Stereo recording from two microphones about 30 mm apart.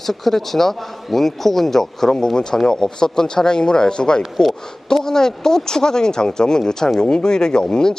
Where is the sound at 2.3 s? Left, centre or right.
Left.